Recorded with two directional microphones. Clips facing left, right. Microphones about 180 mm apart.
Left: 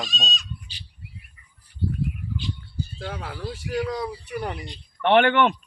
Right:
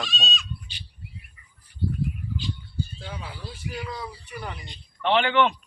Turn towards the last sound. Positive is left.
turn(degrees=55)  # may be behind; listen again after turning